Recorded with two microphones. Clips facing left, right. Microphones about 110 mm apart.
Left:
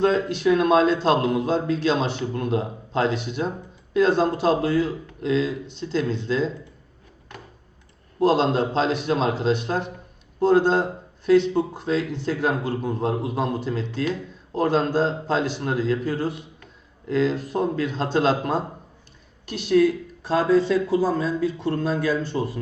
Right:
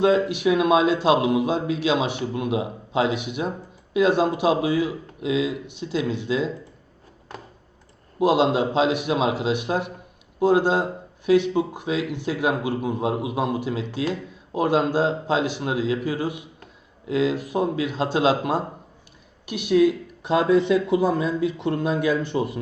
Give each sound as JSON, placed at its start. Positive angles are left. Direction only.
{"t": 0.0, "sound": "a man's voice", "side_deg": -10}
{"t": 8.2, "sound": "a man's voice", "side_deg": -10}